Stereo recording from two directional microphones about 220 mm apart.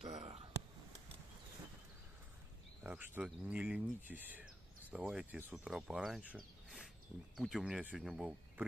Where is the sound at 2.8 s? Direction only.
5° right (ahead or behind).